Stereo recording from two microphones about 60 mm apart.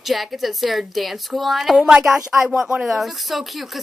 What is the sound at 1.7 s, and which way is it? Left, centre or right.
A woman's voice, centre.